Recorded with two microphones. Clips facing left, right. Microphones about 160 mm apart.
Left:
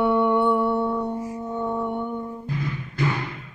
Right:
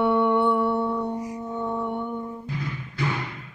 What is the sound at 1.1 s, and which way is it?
Music, 20° right (ahead or behind).